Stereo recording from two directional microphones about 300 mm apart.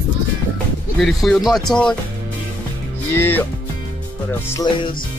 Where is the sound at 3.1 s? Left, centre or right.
Centre.